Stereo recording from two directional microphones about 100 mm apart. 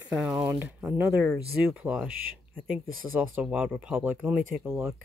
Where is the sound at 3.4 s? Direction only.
10° right (ahead or behind).